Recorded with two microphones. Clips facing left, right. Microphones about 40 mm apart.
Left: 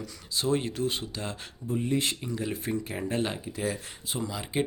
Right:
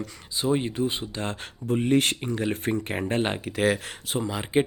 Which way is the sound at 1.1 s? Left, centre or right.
Right.